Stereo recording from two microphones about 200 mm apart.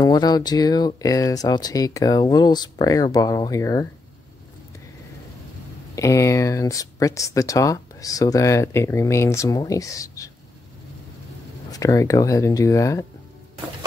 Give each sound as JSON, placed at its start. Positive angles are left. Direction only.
{"t": 0.0, "sound": "speech", "side_deg": 20}
{"t": 5.9, "sound": "speech", "side_deg": 15}
{"t": 11.7, "sound": "speech", "side_deg": 15}